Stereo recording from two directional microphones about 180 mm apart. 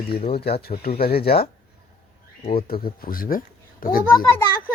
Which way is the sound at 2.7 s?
55° left (ahead or behind).